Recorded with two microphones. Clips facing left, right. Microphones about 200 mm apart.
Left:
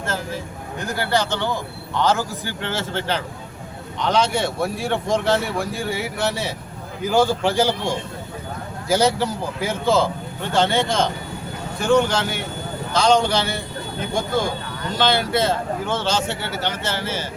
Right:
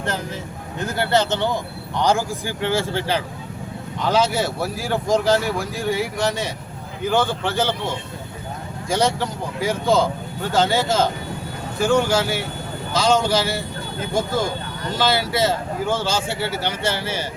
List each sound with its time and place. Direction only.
0.9 s speech: 20° right (ahead or behind); by 7.7 s 10° left (ahead or behind)
8.9 s speech: 5° left (ahead or behind)